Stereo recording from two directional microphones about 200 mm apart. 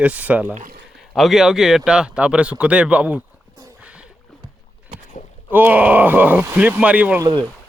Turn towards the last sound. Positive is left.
turn(degrees=-20)  # may be behind; listen again after turning